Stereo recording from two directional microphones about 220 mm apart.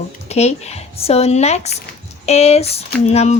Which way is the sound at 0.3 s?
30° left (ahead or behind).